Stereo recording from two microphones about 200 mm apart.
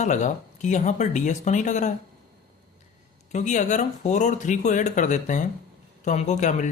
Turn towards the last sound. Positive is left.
turn(degrees=35)  # may be behind; listen again after turning